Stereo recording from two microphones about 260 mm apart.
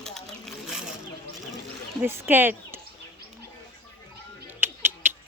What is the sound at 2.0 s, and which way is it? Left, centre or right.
Speech, centre.